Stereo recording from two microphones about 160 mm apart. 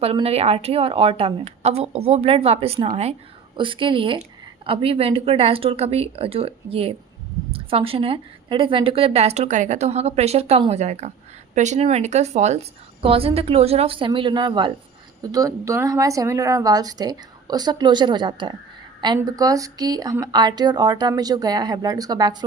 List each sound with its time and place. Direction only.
0.0 s a woman's voice: 40° right (ahead or behind)